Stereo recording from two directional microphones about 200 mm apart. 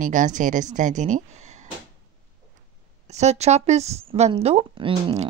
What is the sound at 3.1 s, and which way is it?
Speech, 35° right (ahead or behind).